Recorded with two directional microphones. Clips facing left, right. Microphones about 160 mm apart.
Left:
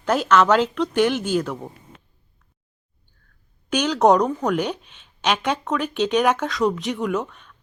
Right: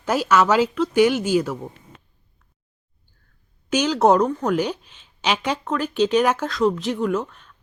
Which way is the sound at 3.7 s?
10° right (ahead or behind).